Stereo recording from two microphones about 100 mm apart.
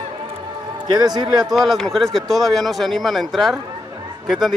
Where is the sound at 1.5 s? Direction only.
Centre (ahead or behind).